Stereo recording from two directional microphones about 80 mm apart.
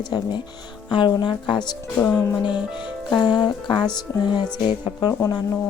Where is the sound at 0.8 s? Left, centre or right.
Left.